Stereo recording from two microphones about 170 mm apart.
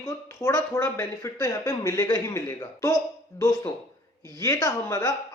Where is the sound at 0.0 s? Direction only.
15° left (ahead or behind).